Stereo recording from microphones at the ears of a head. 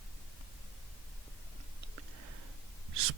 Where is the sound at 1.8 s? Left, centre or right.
Right.